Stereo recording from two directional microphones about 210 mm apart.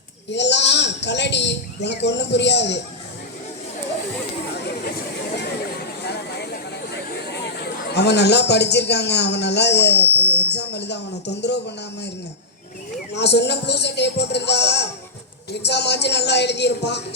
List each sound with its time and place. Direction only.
0.3 s speech: 55° left (ahead or behind)
4.5 s chatter: 50° left (ahead or behind)
6.0 s speech: 50° left (ahead or behind)
13.1 s a man's voice: 55° left (ahead or behind)